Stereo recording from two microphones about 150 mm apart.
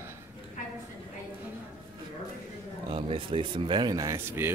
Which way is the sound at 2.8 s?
35° right (ahead or behind).